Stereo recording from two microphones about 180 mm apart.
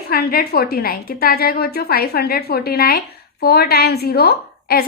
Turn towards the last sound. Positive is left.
turn(degrees=60)  # may be behind; listen again after turning